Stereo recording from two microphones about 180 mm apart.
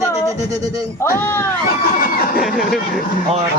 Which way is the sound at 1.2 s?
15° left (ahead or behind).